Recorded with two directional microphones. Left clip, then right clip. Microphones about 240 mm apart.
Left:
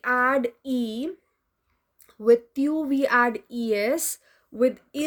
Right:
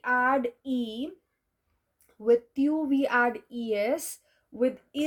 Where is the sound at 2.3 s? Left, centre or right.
Left.